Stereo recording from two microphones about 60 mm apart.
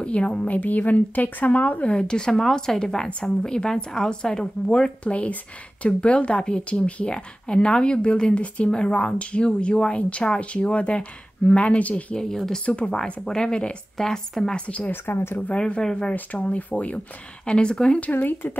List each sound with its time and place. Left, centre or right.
0.0 s a woman's voice: centre
12.2 s a woman's voice: centre
12.6 s a woman's voice: centre
14.9 s a woman's voice: left
15.3 s a woman's voice: left
18.1 s a woman's voice: left